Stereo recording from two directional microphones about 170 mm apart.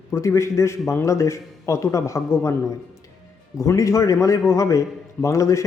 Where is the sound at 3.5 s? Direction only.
20° left (ahead or behind).